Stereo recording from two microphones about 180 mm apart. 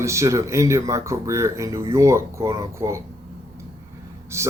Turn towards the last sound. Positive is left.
turn(degrees=-15)  # may be behind; listen again after turning